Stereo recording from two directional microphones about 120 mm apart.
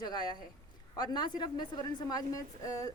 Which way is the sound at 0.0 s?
40° left (ahead or behind).